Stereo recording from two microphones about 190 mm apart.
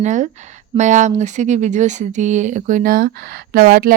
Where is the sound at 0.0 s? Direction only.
40° right (ahead or behind).